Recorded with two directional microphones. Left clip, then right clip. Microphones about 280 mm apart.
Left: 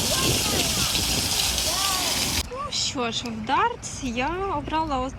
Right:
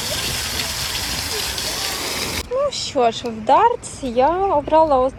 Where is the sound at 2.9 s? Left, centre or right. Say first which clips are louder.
Right 10 dB; centre.